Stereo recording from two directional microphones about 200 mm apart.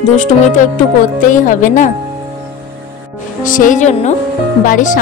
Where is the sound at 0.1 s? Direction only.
40° left (ahead or behind).